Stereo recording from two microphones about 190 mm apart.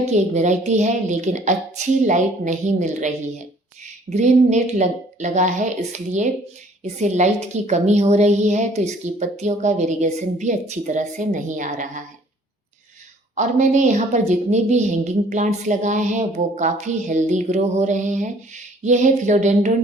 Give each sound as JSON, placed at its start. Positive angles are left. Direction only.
{"t": 0.0, "sound": "speech", "side_deg": -35}
{"t": 13.3, "sound": "speech", "side_deg": -40}